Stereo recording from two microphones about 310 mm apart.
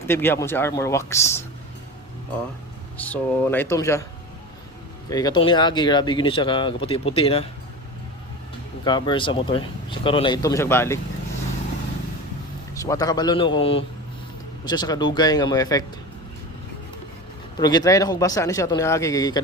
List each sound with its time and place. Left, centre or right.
0.1 s speech: centre
3.0 s speech: centre
5.0 s speech: centre
8.8 s speech: centre
12.7 s speech: centre
17.6 s speech: centre